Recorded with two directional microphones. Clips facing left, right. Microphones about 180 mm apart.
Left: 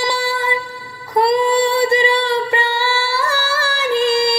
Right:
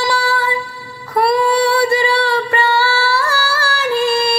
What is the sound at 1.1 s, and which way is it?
Female singing, 20° left (ahead or behind).